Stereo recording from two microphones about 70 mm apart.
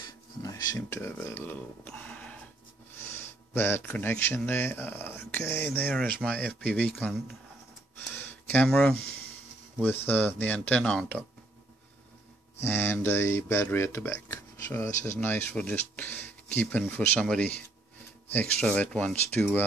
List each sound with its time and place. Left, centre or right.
0.0 s a sound: left
0.8 s speech: left
1.9 s music: centre
3.2 s a sound: left
4.2 s speech: left
8.1 s a sound: left
8.6 s speech: centre
9.8 s speech: left
12.5 s speech: left
15.1 s speech: left